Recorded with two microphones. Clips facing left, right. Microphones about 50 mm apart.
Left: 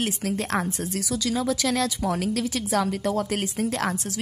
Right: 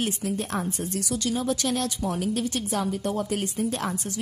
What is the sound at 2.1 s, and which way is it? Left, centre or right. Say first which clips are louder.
A woman's voice: left 1 dB; left.